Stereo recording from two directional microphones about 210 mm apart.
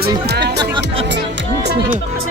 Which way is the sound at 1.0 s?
55° right (ahead or behind).